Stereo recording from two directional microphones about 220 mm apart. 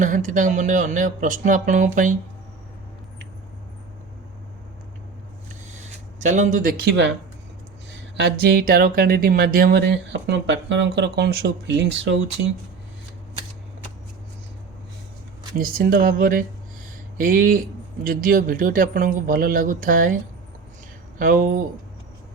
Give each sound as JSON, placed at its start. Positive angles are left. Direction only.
{"t": 0.0, "sound": "a man's voice", "side_deg": -35}
{"t": 5.8, "sound": "speech", "side_deg": -35}
{"t": 8.1, "sound": "speech", "side_deg": -50}
{"t": 15.5, "sound": "a man's voice", "side_deg": -40}
{"t": 21.2, "sound": "a man's voice", "side_deg": -40}